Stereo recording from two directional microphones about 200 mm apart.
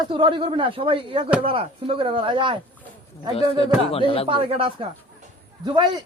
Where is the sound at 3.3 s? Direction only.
30° left (ahead or behind).